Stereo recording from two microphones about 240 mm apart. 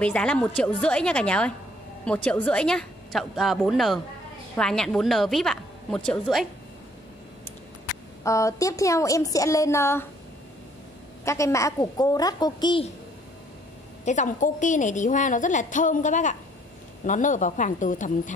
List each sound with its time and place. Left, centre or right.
0.0 s a woman's voice: centre
8.2 s a woman's voice: centre
11.2 s a woman's voice: centre
14.0 s a woman's voice: left